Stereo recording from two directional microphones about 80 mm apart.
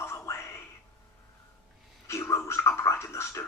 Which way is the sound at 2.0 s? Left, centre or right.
Left.